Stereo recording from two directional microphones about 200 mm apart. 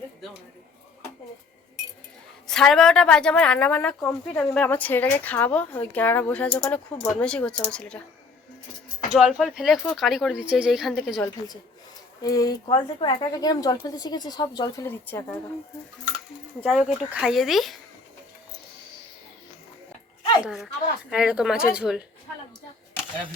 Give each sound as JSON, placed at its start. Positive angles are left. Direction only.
{"t": 2.5, "sound": "a woman's voice", "side_deg": 5}
{"t": 9.1, "sound": "speech", "side_deg": 0}
{"t": 12.2, "sound": "speech", "side_deg": 20}
{"t": 16.6, "sound": "speech", "side_deg": -5}
{"t": 20.4, "sound": "speech", "side_deg": 0}